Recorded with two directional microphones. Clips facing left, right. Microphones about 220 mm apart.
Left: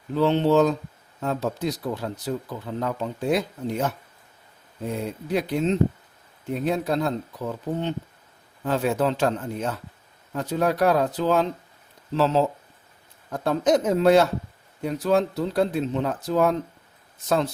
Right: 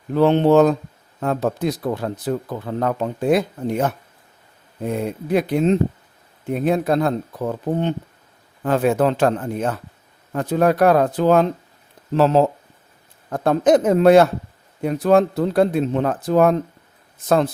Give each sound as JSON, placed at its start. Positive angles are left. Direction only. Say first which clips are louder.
{"t": 0.1, "sound": "speech", "louder": "right 5 dB", "side_deg": -55}